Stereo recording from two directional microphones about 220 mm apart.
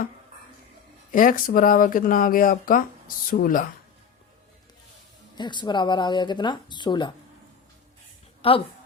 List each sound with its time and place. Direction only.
1.1 s speech: 40° left (ahead or behind)
5.4 s speech: 20° left (ahead or behind)
8.4 s speech: 25° left (ahead or behind)